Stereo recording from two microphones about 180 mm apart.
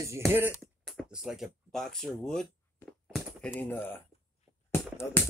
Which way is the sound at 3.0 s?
Centre (ahead or behind).